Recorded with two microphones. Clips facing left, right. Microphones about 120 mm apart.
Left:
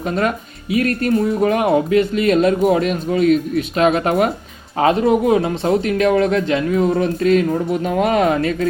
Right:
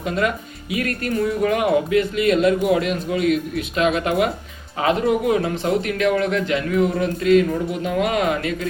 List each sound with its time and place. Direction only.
0.0 s a man's voice: 35° left (ahead or behind)